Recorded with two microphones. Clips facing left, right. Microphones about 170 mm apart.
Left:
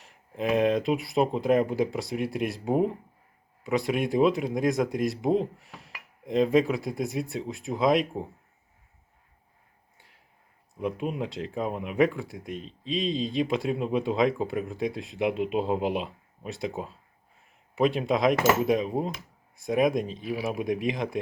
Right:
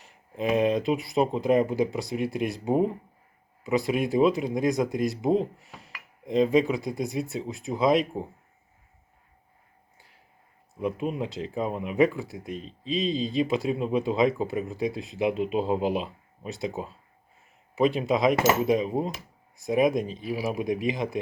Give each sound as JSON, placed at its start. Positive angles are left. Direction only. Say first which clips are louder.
{"t": 0.0, "sound": "speech", "louder": "right 1 dB", "side_deg": 0}
{"t": 10.8, "sound": "speech", "louder": "right 1 dB", "side_deg": 0}